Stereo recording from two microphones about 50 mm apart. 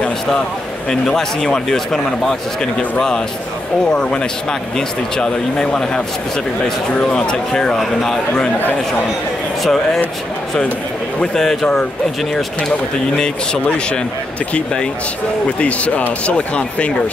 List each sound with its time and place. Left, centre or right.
0.8 s speech: centre
3.9 s speech: centre
9.6 s speech: centre
11.1 s speech: centre
13.1 s speech: centre